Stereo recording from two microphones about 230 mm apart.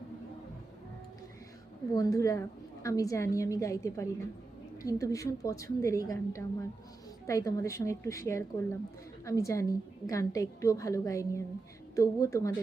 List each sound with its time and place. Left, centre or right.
2.0 s a woman's voice: centre